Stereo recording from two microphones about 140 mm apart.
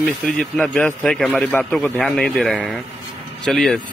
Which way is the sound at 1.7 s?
5° left (ahead or behind).